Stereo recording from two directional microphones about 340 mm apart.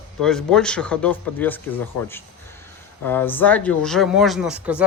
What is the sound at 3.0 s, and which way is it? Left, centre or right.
Speech, centre.